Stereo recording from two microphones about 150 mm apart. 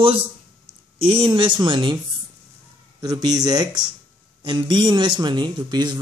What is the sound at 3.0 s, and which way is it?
Speech, 25° right (ahead or behind).